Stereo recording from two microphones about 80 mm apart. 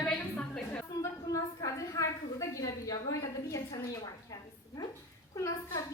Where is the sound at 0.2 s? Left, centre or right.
Centre.